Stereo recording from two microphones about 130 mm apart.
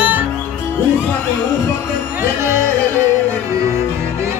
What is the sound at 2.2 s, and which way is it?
Music, 20° right (ahead or behind).